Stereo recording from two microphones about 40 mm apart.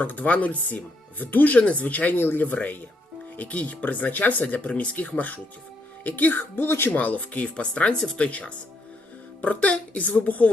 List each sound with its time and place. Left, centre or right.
0.0 s speech: left
1.5 s speech: left
2.5 s speech: left
6.6 s speech: left
6.9 s speech: left